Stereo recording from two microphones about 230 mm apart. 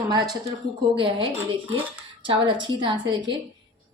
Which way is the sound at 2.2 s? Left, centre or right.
Right.